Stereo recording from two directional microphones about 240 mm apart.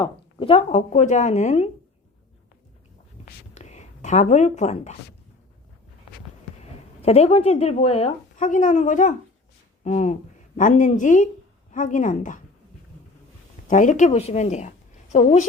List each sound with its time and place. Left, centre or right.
0.0 s speech: left
3.5 s speech: left
6.6 s a woman's voice: left
13.7 s speech: left